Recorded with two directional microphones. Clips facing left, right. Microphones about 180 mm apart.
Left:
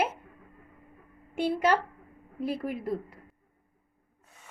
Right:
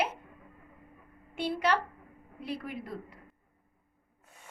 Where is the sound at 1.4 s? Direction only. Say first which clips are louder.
Left 4 dB; 45° left (ahead or behind).